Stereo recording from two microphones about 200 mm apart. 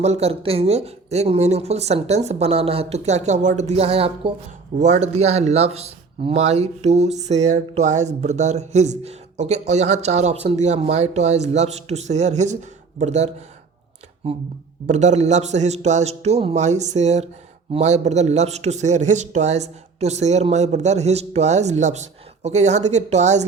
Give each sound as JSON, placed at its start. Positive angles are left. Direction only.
{"t": 0.0, "sound": "speech", "side_deg": -30}
{"t": 14.8, "sound": "speech", "side_deg": -35}